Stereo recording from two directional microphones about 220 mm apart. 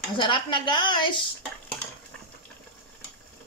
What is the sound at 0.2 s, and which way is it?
A woman's voice, 20° left (ahead or behind).